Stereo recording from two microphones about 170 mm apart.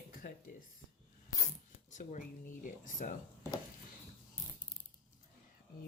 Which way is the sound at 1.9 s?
50° left (ahead or behind).